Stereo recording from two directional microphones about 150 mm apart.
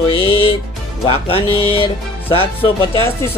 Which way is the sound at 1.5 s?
40° left (ahead or behind).